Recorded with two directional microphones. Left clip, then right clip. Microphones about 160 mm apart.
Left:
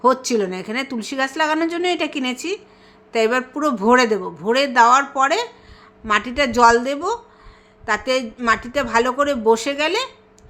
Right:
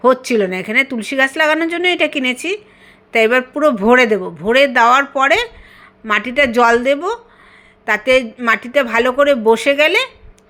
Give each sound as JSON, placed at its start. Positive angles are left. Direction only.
{"t": 0.0, "sound": "a woman's voice", "side_deg": -15}